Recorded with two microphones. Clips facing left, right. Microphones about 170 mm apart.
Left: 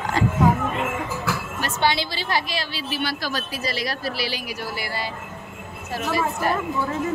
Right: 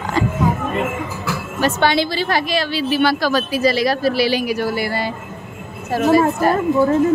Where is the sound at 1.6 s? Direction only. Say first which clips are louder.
Right 7 dB; 55° right (ahead or behind).